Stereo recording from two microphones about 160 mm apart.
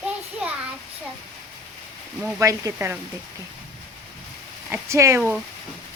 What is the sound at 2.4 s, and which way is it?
Speech, 20° right (ahead or behind).